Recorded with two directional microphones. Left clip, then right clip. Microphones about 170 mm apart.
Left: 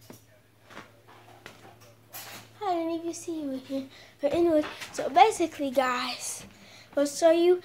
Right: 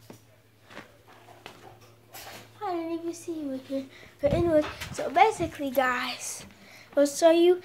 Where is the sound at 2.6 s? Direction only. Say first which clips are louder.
Left 3 dB; 25° left (ahead or behind).